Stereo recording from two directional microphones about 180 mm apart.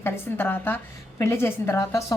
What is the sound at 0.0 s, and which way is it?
A woman's voice, 10° left (ahead or behind).